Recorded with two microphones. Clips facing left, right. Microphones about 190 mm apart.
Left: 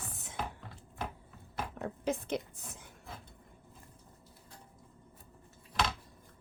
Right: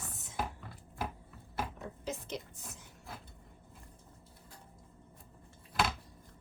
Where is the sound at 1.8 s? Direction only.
55° left (ahead or behind).